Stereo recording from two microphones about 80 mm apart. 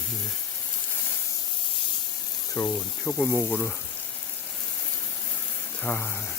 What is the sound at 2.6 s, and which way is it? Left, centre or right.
Speech, left.